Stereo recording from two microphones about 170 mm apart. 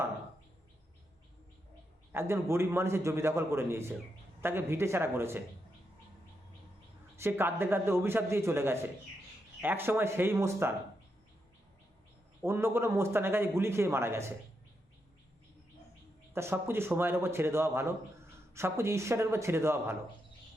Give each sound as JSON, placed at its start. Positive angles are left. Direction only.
{"t": 2.1, "sound": "a man's voice", "side_deg": -15}
{"t": 7.2, "sound": "a man's voice", "side_deg": -15}
{"t": 12.4, "sound": "a man's voice", "side_deg": -15}
{"t": 16.3, "sound": "a man's voice", "side_deg": -15}